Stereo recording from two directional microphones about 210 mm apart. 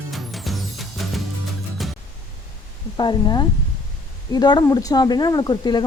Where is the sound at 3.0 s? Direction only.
20° left (ahead or behind).